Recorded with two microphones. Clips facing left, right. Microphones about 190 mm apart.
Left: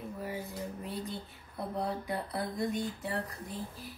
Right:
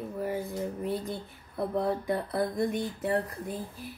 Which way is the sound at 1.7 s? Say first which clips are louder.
Right 6 dB; 55° right (ahead or behind).